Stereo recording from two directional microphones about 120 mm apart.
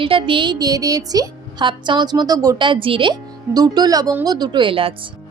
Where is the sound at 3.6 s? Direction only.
35° right (ahead or behind).